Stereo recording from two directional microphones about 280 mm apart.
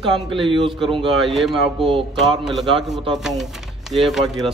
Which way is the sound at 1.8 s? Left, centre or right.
Centre.